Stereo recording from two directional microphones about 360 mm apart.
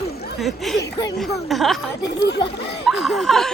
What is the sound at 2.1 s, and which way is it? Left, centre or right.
Speech, left.